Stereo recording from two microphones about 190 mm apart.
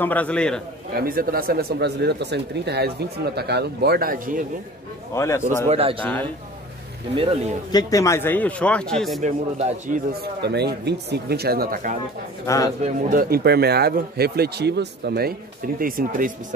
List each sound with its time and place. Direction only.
0.0 s a man's voice: 10° left (ahead or behind)
0.9 s speech: 50° right (ahead or behind)
5.1 s a man's voice: 15° left (ahead or behind)
5.7 s speech: 30° right (ahead or behind)
7.7 s a man's voice: 15° left (ahead or behind); by 9.2 s centre (ahead or behind)
9.2 s speech: 40° right (ahead or behind)
10.4 s speech: 60° right (ahead or behind); by 12.0 s 45° right (ahead or behind)
12.4 s a man's voice: 20° left (ahead or behind)
12.8 s speech: 45° right (ahead or behind)